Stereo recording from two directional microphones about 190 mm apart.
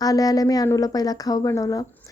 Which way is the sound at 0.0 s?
20° left (ahead or behind).